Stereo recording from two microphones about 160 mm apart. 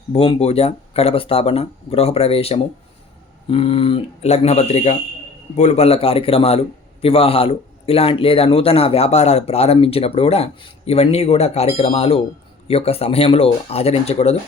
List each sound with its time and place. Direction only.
0.1 s a man's voice: 40° left (ahead or behind)